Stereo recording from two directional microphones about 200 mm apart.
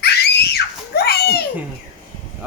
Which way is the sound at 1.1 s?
55° left (ahead or behind).